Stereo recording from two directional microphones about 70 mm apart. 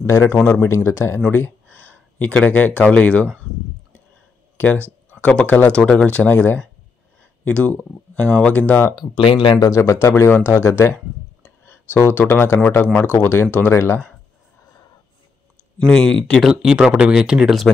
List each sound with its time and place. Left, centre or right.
0.0 s speech: left
0.4 s speech: left
0.7 s speech: left
1.3 s a sound: left
2.3 s speech: centre
5.2 s speech: centre
8.9 s speech: left
9.7 s speech: left
15.9 s speech: centre
16.4 s speech: centre